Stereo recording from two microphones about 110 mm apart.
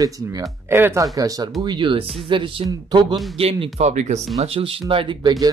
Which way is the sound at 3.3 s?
60° right (ahead or behind).